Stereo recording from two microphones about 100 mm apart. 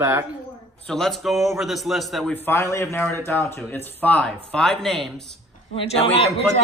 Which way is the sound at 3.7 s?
15° left (ahead or behind).